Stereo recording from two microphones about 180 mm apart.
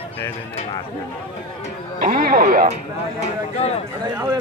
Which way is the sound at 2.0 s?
55° right (ahead or behind).